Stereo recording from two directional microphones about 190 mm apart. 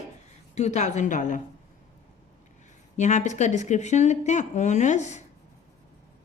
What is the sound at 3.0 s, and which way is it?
A woman's voice, 40° left (ahead or behind).